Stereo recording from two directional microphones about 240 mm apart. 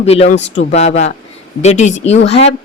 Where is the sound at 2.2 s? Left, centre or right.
Left.